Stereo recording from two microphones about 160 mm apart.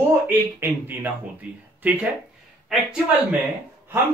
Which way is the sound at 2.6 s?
5° right (ahead or behind).